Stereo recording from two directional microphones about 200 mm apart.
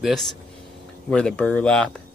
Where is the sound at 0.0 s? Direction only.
Centre (ahead or behind).